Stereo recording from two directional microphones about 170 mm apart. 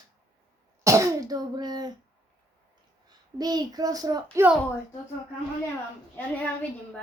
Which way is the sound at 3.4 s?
25° right (ahead or behind).